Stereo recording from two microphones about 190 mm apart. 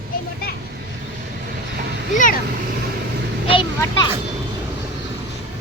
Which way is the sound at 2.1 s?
45° left (ahead or behind).